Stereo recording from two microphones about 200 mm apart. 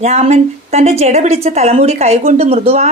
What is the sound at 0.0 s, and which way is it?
A woman's voice, 35° right (ahead or behind).